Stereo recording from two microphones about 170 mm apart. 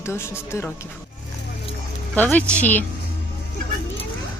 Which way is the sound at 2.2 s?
10° left (ahead or behind).